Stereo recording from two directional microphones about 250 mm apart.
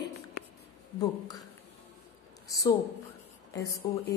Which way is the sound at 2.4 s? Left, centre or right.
Centre.